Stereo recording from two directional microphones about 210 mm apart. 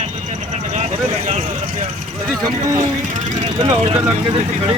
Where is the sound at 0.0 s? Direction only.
30° right (ahead or behind).